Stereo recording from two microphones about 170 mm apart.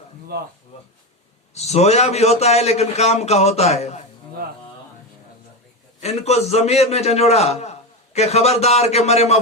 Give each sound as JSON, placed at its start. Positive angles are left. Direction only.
{"t": 0.3, "sound": "speech", "side_deg": -70}
{"t": 1.5, "sound": "a man's voice", "side_deg": 40}
{"t": 6.0, "sound": "a man's voice", "side_deg": 40}